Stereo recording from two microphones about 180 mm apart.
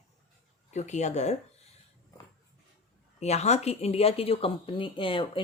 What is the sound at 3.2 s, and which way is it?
Speech, 35° left (ahead or behind).